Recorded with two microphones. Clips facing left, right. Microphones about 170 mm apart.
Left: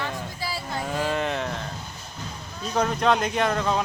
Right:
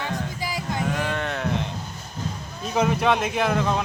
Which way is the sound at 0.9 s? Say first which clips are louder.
Left 1 dB; 5° left (ahead or behind).